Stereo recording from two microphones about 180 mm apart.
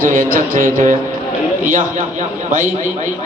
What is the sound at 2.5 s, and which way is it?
Speech, 45° right (ahead or behind).